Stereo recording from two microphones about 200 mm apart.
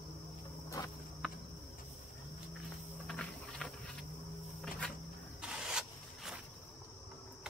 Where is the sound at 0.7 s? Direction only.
15° left (ahead or behind).